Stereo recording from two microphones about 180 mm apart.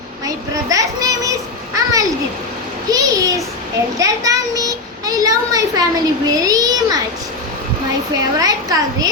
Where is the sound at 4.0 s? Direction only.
20° right (ahead or behind).